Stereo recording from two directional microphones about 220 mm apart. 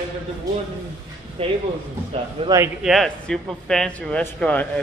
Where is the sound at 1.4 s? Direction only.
25° right (ahead or behind).